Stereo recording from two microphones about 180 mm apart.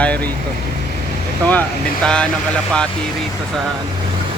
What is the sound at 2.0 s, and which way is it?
Speech, 5° left (ahead or behind).